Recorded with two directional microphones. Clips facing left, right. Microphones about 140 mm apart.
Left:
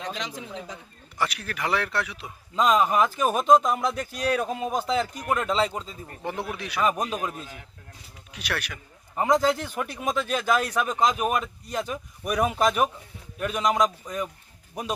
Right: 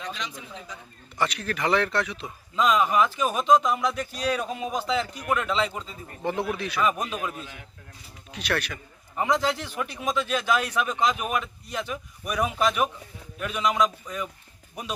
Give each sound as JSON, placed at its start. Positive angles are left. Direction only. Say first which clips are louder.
{"t": 0.2, "sound": "a man's voice", "louder": "left 3 dB", "side_deg": 90}
{"t": 1.2, "sound": "speech", "louder": "right 2 dB", "side_deg": 10}
{"t": 2.6, "sound": "speech", "louder": "left 1 dB", "side_deg": 40}
{"t": 6.6, "sound": "speech", "louder": "right 1 dB", "side_deg": 15}
{"t": 6.8, "sound": "a man's voice", "louder": "left 2 dB", "side_deg": 40}
{"t": 8.3, "sound": "speech", "louder": "right 4 dB", "side_deg": 10}
{"t": 9.1, "sound": "a man's voice", "louder": "left 3 dB", "side_deg": 40}